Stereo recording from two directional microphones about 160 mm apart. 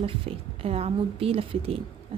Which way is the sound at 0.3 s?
40° right (ahead or behind).